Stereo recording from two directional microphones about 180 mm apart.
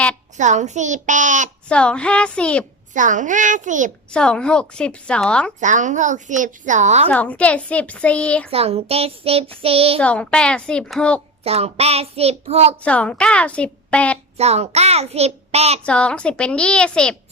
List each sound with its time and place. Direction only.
0.3 s a woman's voice: 40° right (ahead or behind)
1.6 s a woman's voice: 5° left (ahead or behind)
2.9 s a woman's voice: 45° right (ahead or behind)
4.1 s a woman's voice: 5° left (ahead or behind)
5.5 s a woman's voice: 45° right (ahead or behind)
7.1 s a woman's voice: 10° left (ahead or behind)
8.4 s a child's voice: 35° right (ahead or behind)
10.0 s a woman's voice: 5° left (ahead or behind)
11.4 s a child's voice: 35° right (ahead or behind)
12.8 s a woman's voice: 5° left (ahead or behind)
14.3 s a child's voice: 35° right (ahead or behind)
15.8 s a woman's voice: 5° left (ahead or behind)